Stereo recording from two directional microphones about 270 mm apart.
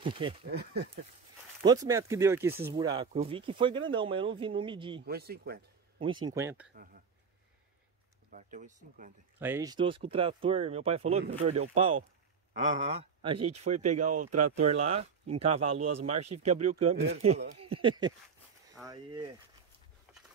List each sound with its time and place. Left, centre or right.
0.0 s speech: centre
0.5 s speech: right
1.6 s speech: centre
5.0 s speech: right
5.9 s speech: centre
6.7 s speech: right
8.3 s speech: right
9.4 s speech: centre
20.1 s a sound: centre